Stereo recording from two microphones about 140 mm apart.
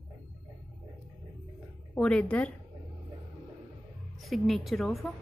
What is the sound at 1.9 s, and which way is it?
Speech, 10° left (ahead or behind).